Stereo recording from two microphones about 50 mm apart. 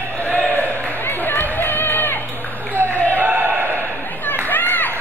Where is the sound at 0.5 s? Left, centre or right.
Left.